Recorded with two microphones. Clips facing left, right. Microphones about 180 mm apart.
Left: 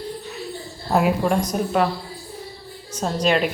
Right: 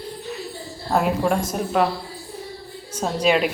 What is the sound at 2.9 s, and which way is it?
Speech, 5° right (ahead or behind).